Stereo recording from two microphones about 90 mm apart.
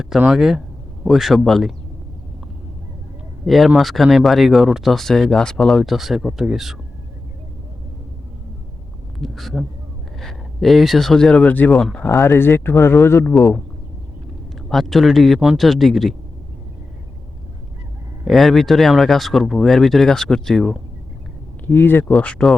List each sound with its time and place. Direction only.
0.3 s speech: 5° right (ahead or behind)
3.4 s speech: centre (ahead or behind)
9.1 s speech: centre (ahead or behind); by 11.8 s 15° left (ahead or behind)
11.8 s speech: 5° left (ahead or behind)
12.0 s speech: 25° left (ahead or behind)
14.7 s speech: centre (ahead or behind)
18.3 s speech: centre (ahead or behind)
21.7 s speech: 25° left (ahead or behind)